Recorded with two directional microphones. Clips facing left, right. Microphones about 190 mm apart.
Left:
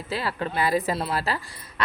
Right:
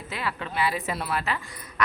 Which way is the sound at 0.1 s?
35° left (ahead or behind).